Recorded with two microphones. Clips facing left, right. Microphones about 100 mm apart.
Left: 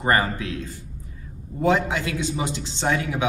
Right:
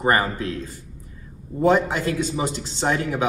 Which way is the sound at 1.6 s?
40° right (ahead or behind).